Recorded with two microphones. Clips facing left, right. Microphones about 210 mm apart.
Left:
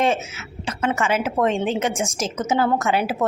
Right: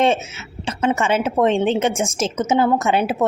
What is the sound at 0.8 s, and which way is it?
Speech, 25° right (ahead or behind).